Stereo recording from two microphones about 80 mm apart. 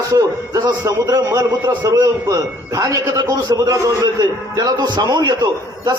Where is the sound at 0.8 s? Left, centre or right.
Right.